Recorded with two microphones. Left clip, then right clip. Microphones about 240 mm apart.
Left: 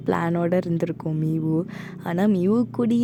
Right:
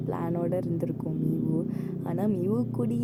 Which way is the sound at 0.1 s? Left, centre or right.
Left.